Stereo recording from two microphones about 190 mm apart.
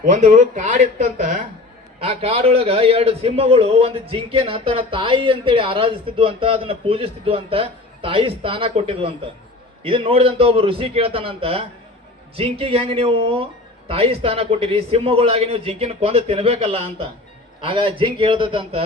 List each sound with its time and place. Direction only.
0.0 s speech: 40° right (ahead or behind)
2.0 s a man's voice: 30° right (ahead or behind)